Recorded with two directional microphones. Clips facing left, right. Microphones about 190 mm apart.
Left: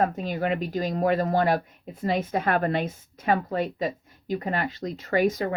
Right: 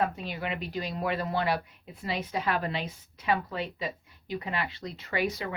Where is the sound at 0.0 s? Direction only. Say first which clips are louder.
Left 6 dB; 45° left (ahead or behind).